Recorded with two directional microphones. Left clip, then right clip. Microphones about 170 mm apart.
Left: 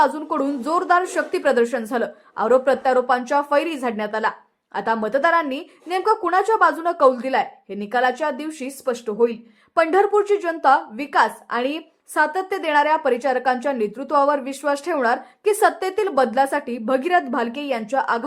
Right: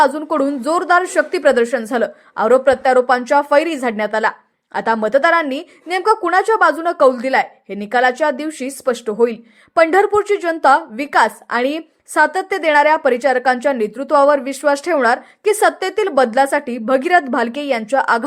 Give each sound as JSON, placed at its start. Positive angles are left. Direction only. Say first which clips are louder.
{"t": 0.0, "sound": "a woman's voice", "louder": "right 5 dB", "side_deg": -20}